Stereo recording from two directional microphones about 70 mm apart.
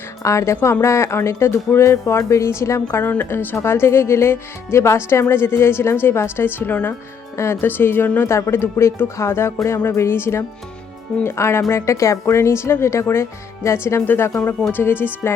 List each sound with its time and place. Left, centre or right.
0.2 s speech: left
7.3 s speech: left
8.3 s speech: left